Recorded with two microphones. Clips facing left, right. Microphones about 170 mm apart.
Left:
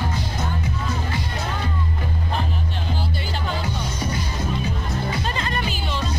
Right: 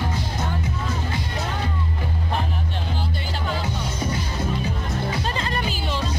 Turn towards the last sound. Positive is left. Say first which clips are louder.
# even
turn(degrees=-30)  # may be behind; listen again after turning